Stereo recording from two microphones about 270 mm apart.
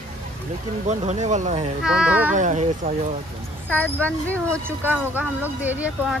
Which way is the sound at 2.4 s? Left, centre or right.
Right.